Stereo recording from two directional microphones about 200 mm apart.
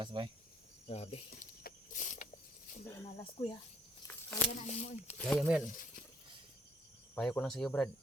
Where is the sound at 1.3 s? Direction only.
45° left (ahead or behind).